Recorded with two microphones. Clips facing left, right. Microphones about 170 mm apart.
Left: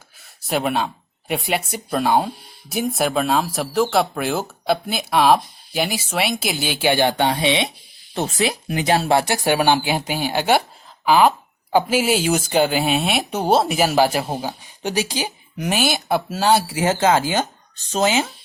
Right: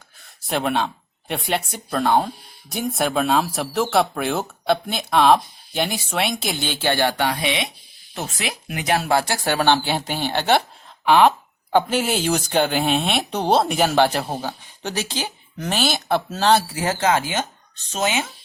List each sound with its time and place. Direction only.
0.4 s speech: 5° left (ahead or behind); by 18.3 s 30° left (ahead or behind)